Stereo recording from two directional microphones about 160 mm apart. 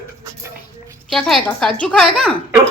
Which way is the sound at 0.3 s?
20° right (ahead or behind).